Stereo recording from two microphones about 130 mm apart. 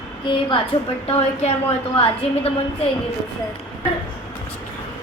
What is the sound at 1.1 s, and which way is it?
A woman's voice, 55° left (ahead or behind).